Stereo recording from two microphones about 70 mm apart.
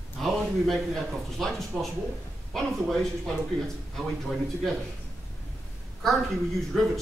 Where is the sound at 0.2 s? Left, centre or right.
Centre.